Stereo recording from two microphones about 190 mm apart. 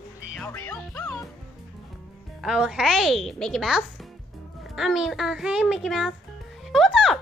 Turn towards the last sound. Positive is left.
turn(degrees=0)  # may be behind; listen again after turning